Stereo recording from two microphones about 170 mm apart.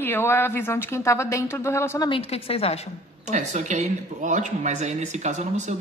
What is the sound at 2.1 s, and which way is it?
Speech, 35° left (ahead or behind).